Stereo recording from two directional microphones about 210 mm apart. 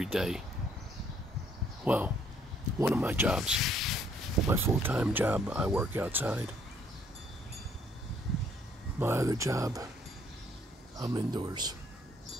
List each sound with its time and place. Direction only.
0.0 s speech: centre (ahead or behind)
1.9 s speech: 5° right (ahead or behind)
4.5 s speech: 10° right (ahead or behind)
9.0 s speech: 15° right (ahead or behind)
11.0 s speech: 20° right (ahead or behind)